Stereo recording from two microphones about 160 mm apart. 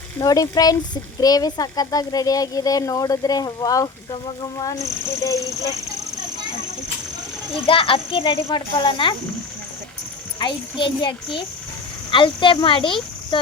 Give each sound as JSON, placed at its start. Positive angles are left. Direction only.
{"t": 0.2, "sound": "speech", "side_deg": 25}
{"t": 7.5, "sound": "speech", "side_deg": 35}
{"t": 10.4, "sound": "speech", "side_deg": 30}